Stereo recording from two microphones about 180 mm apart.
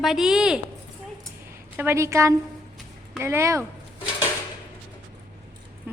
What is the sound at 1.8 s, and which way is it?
A woman's voice, 15° right (ahead or behind).